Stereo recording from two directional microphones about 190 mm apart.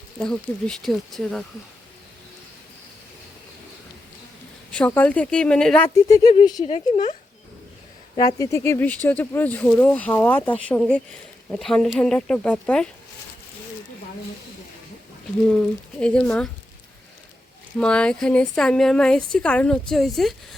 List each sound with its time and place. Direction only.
0.2 s a woman's voice: 5° left (ahead or behind)
4.7 s speech: 10° left (ahead or behind); by 8.4 s 30° left (ahead or behind)
8.4 s a woman's voice: 15° left (ahead or behind)
16.0 s a woman's voice: 5° left (ahead or behind)
17.7 s a woman's voice: 5° left (ahead or behind)